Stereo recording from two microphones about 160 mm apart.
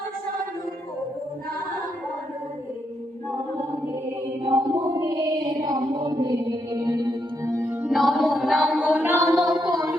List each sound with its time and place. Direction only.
4.4 s mantra: 20° right (ahead or behind)
7.9 s music: centre (ahead or behind)
9.6 s a sound: 25° right (ahead or behind)